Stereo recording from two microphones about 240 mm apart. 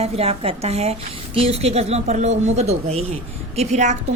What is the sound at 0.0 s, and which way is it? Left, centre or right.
A woman's voice, right.